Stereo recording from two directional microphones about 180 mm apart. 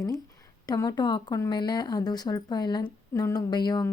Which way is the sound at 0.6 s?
20° left (ahead or behind).